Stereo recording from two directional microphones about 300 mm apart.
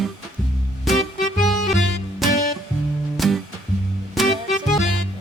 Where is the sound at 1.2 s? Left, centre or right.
Left.